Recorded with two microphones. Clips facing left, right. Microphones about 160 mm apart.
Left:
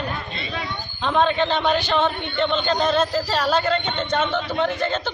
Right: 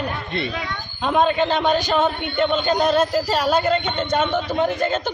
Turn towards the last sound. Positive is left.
turn(degrees=-10)  # may be behind; listen again after turning